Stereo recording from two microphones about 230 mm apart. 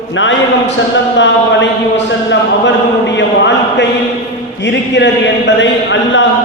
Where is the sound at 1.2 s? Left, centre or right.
Left.